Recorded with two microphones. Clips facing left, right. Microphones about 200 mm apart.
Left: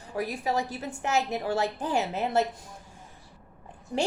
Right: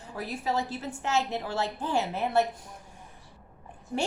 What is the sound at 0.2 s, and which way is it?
A woman's voice, 15° left (ahead or behind).